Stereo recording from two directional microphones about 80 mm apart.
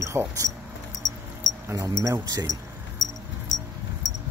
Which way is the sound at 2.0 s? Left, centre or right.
Right.